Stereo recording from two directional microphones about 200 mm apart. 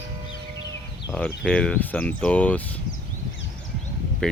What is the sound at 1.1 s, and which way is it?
Speech, 5° left (ahead or behind).